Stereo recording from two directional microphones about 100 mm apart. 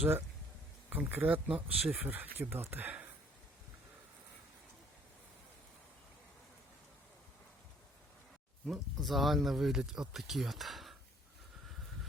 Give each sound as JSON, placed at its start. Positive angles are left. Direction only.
{"t": 0.9, "sound": "speech", "side_deg": -20}
{"t": 8.6, "sound": "speech", "side_deg": 0}